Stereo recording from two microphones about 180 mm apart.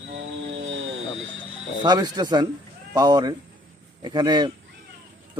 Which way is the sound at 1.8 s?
25° right (ahead or behind).